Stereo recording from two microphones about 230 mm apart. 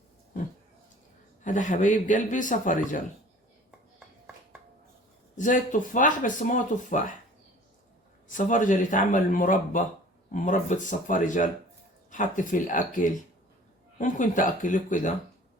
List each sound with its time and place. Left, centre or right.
1.5 s speech: left
5.4 s speech: left
8.3 s speech: left